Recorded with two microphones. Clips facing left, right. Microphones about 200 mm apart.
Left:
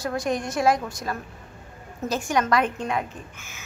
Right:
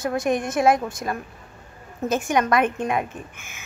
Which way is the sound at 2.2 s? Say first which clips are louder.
Right 1 dB; 20° right (ahead or behind).